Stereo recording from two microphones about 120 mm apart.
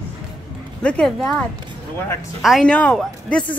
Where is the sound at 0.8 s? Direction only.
10° left (ahead or behind).